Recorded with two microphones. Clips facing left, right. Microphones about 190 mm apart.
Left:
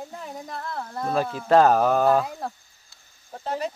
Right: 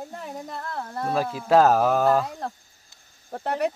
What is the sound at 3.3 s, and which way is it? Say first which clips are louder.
Speech: right 3 dB; 65° right (ahead or behind).